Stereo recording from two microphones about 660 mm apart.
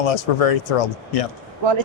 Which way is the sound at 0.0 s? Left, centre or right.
Left.